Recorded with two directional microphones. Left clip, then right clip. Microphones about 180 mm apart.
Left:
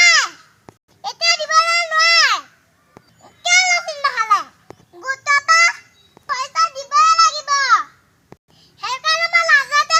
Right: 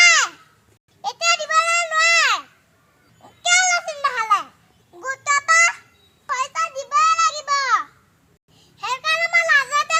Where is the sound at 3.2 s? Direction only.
10° right (ahead or behind).